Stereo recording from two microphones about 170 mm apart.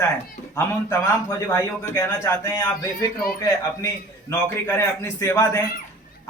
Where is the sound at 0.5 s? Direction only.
20° left (ahead or behind).